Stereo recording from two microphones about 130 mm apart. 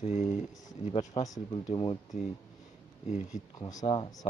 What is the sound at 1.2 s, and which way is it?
Speech, 30° left (ahead or behind).